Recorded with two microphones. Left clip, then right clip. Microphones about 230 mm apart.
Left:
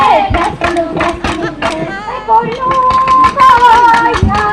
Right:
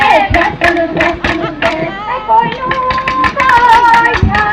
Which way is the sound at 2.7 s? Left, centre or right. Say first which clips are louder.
Left 5 dB; left.